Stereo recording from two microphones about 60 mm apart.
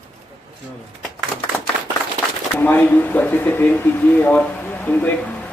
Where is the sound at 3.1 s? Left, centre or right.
Left.